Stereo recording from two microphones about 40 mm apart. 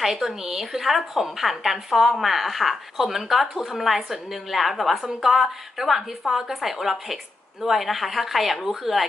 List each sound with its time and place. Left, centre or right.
0.0 s a woman's voice: centre